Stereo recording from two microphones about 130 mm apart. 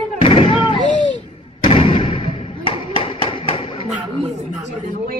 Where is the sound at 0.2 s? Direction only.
45° left (ahead or behind).